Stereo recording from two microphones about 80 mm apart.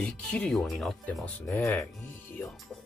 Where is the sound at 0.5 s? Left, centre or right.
Centre.